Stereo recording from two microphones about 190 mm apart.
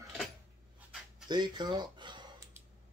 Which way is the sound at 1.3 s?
20° right (ahead or behind).